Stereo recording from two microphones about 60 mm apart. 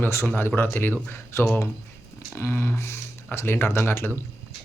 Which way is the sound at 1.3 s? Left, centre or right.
Left.